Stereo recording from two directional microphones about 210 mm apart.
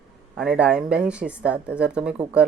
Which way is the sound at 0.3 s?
5° right (ahead or behind).